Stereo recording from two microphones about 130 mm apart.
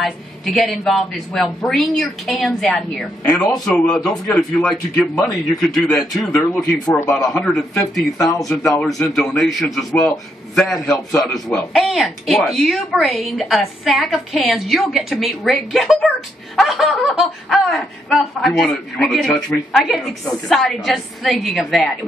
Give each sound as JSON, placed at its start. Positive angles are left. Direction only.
{"t": 0.0, "sound": "a man's voice", "side_deg": 0}
{"t": 6.5, "sound": "speech", "side_deg": 20}
{"t": 7.1, "sound": "a man's voice", "side_deg": 5}